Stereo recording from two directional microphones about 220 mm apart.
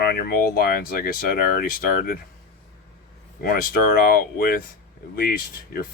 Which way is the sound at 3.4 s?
40° left (ahead or behind).